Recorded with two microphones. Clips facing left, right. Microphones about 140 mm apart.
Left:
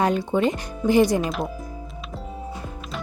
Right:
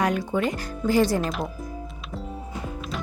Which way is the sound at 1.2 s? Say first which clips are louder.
Left 2 dB; centre (ahead or behind).